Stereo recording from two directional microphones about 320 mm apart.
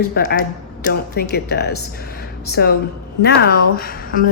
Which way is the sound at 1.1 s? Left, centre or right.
Left.